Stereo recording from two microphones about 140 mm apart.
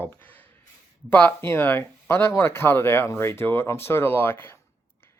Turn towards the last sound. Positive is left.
turn(degrees=15)  # may be behind; listen again after turning